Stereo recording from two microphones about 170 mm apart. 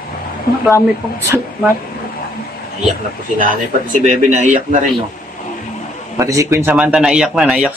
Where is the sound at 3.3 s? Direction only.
50° right (ahead or behind).